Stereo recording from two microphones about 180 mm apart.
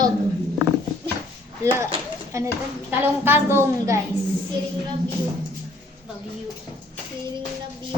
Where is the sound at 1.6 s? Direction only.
15° right (ahead or behind).